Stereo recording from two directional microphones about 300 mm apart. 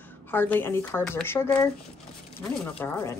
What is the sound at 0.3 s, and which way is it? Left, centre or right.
Speech, centre.